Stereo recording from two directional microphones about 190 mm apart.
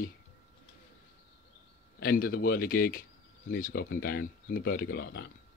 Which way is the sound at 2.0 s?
50° left (ahead or behind).